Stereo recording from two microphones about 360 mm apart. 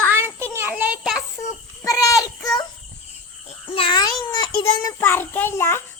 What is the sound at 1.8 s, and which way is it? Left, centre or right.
Child singing, centre.